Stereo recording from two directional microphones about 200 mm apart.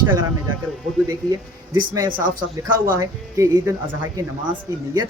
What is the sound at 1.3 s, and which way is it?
Speech, 20° right (ahead or behind).